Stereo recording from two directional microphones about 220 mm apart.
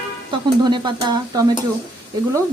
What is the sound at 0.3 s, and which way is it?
Speech, 20° right (ahead or behind).